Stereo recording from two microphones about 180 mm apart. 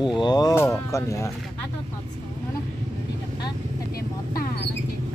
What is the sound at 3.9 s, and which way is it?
Vehicle, 55° left (ahead or behind).